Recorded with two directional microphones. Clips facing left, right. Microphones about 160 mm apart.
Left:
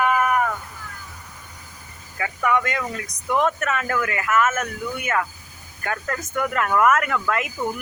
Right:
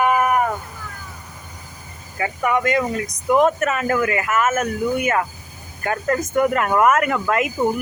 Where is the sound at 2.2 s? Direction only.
20° right (ahead or behind).